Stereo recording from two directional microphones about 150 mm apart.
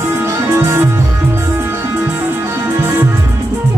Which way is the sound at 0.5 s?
15° right (ahead or behind).